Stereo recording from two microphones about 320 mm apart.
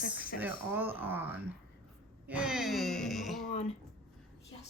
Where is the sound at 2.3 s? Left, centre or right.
Centre.